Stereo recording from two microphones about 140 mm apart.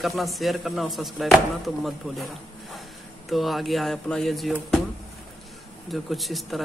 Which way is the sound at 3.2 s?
Centre (ahead or behind).